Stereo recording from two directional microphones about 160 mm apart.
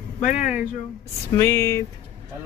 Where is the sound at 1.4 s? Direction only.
15° left (ahead or behind).